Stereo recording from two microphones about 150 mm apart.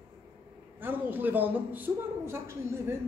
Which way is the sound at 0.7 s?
15° right (ahead or behind).